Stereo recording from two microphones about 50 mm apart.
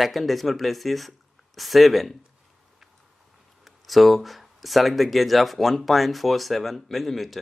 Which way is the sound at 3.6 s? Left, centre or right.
Centre.